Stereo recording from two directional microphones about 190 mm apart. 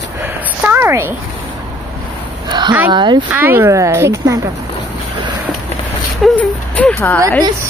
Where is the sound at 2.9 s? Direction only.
25° right (ahead or behind).